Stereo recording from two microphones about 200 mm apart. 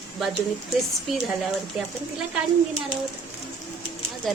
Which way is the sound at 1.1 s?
Centre (ahead or behind).